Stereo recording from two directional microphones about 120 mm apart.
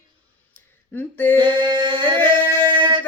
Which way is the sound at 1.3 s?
40° right (ahead or behind).